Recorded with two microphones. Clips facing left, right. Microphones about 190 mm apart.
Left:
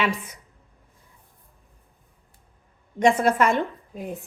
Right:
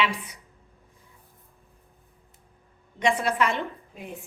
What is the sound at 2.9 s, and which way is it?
A woman's voice, 45° left (ahead or behind).